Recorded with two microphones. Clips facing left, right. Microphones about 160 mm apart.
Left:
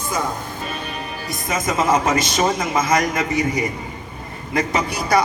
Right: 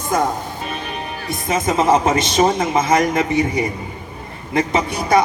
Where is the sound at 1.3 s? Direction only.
30° right (ahead or behind).